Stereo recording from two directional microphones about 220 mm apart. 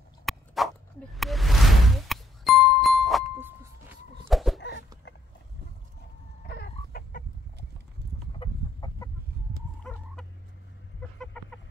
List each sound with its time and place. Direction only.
0.2 s dog: centre (ahead or behind)
1.1 s music: centre (ahead or behind)
6.4 s chicken: 45° left (ahead or behind)
8.4 s chicken: 20° left (ahead or behind)
10.2 s fowl: 5° left (ahead or behind)
11.4 s chicken: 5° left (ahead or behind)